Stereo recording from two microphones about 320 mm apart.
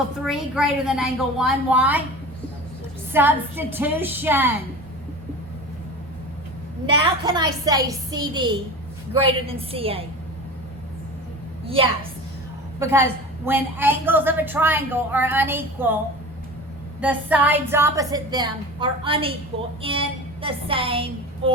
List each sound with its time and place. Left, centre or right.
0.3 s a woman's voice: centre
3.1 s a woman's voice: centre
7.0 s a woman's voice: centre
11.6 s a woman's voice: centre
17.0 s a woman's voice: centre